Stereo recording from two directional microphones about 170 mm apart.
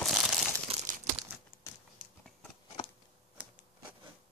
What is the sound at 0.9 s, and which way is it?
Crumpling, 45° right (ahead or behind).